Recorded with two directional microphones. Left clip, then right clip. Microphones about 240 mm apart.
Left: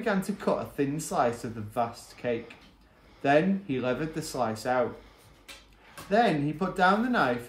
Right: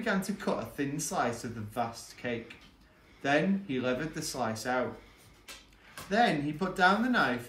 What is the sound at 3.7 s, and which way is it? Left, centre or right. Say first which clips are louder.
Speech: left 3 dB; left.